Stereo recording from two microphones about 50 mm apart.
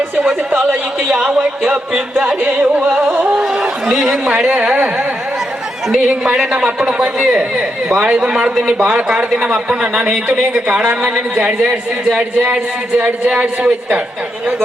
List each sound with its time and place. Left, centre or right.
1.0 s speech: centre
2.4 s a man's voice: right
3.4 s chatter: centre
4.5 s a man's voice: right
6.1 s a man's voice: centre; by 14.0 s right